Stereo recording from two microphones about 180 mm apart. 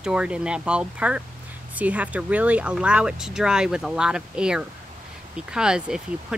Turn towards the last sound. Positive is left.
turn(degrees=-5)  # may be behind; listen again after turning